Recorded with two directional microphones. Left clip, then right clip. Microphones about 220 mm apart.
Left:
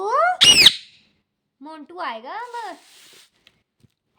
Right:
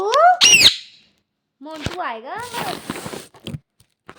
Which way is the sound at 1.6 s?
50° left (ahead or behind).